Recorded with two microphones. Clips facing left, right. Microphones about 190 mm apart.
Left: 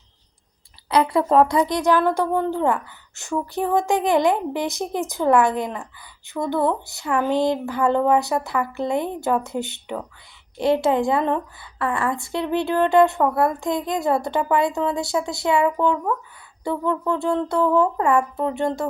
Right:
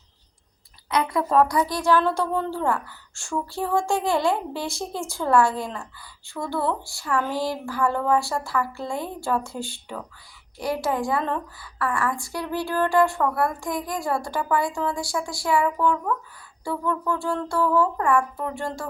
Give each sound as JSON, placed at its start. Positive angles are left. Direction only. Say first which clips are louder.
{"t": 0.9, "sound": "a woman's voice", "louder": "left 5 dB", "side_deg": 30}